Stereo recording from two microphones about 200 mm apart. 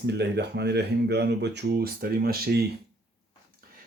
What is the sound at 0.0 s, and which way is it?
Speech, 55° right (ahead or behind).